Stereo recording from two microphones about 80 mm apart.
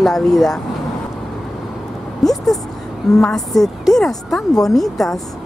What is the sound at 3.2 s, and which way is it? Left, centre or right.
A woman's voice, centre.